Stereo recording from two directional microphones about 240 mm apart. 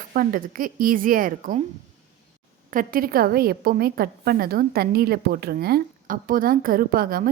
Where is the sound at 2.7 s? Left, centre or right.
Right.